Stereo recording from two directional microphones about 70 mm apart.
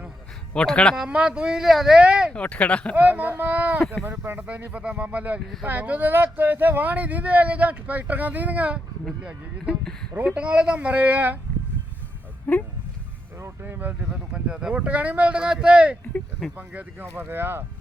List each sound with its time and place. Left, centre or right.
0.5 s speech: centre
0.9 s speech: centre
2.3 s speech: centre
2.9 s speech: right
10.2 s speech: centre
12.5 s speech: left
13.4 s speech: right
14.0 s speech: centre; by 17.7 s right